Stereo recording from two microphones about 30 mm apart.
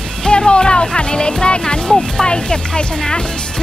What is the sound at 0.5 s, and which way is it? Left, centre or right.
Speech, left.